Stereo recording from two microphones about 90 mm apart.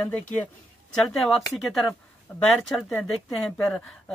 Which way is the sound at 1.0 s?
Centre (ahead or behind).